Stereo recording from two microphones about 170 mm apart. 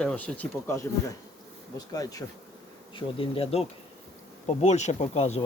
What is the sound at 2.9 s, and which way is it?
Speech, 35° left (ahead or behind).